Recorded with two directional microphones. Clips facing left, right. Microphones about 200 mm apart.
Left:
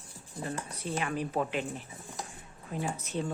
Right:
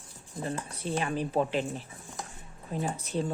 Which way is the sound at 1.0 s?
30° right (ahead or behind).